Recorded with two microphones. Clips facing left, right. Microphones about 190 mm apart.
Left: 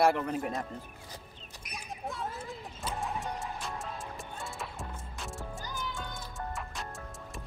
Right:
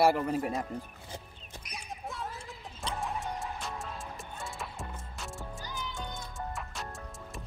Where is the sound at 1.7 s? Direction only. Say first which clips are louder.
Left 2 dB; centre (ahead or behind).